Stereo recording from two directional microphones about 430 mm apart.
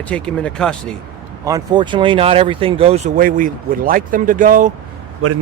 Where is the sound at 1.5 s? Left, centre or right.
Centre.